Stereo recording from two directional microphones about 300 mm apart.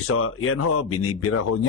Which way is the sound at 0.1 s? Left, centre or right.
Left.